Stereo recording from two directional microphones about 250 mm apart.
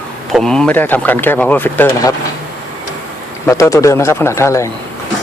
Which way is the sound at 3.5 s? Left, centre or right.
Centre.